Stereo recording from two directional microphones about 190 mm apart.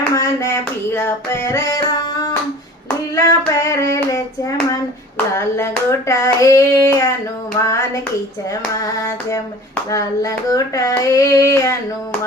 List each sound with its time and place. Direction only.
0.1 s child singing: 15° left (ahead or behind)
3.2 s hands: 15° left (ahead or behind)
7.7 s child singing: 15° left (ahead or behind)